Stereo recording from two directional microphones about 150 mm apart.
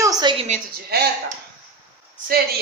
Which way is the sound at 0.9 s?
90° right.